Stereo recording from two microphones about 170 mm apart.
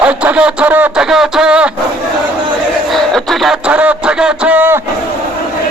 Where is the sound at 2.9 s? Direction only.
Centre (ahead or behind).